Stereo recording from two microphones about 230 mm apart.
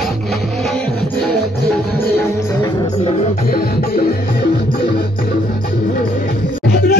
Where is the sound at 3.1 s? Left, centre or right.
Left.